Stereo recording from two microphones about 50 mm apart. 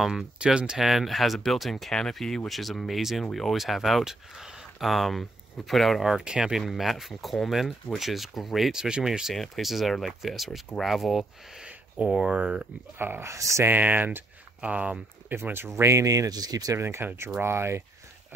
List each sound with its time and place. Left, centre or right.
0.0 s speech: centre
0.4 s speech: centre
0.8 s speech: centre
6.2 s speech: centre
8.7 s speech: centre
9.3 s speech: centre
11.6 s speech: centre
13.2 s speech: right
13.7 s speech: right
14.6 s speech: right
15.2 s speech: right
15.8 s speech: right
17.4 s speech: right